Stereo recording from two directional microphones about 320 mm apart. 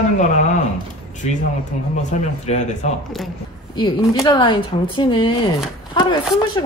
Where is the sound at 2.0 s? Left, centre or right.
Left.